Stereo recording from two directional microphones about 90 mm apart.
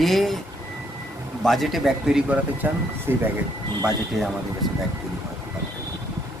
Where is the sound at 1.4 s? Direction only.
5° left (ahead or behind).